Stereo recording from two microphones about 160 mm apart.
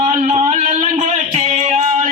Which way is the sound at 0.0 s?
50° right (ahead or behind).